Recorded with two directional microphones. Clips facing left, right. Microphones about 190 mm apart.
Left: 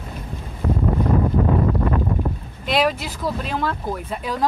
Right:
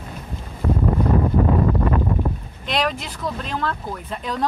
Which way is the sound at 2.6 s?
5° left (ahead or behind).